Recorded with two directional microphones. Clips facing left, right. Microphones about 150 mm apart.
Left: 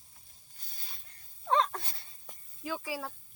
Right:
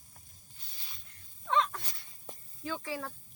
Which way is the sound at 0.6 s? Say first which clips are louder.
Left 2 dB; 45° left (ahead or behind).